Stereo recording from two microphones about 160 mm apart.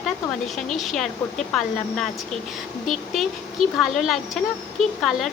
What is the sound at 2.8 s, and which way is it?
Speech, centre (ahead or behind).